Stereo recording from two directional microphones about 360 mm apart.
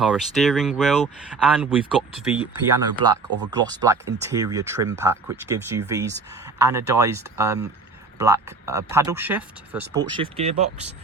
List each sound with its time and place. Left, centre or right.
0.0 s speech: centre
3.2 s speech: right
3.5 s speech: centre